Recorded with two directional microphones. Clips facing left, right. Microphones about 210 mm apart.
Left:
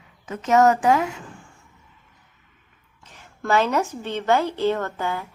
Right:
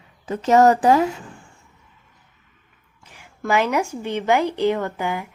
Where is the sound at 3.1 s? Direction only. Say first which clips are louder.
Even; 10° right (ahead or behind).